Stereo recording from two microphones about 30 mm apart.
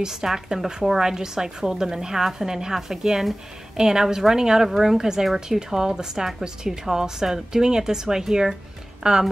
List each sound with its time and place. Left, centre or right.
0.1 s a woman's voice: centre
4.6 s a woman's voice: centre
4.9 s a woman's voice: centre
9.0 s a woman's voice: right